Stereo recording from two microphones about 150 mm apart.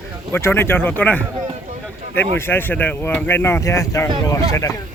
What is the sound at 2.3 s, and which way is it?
Speech, 15° left (ahead or behind).